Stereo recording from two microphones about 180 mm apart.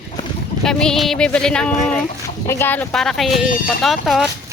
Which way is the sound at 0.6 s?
5° left (ahead or behind).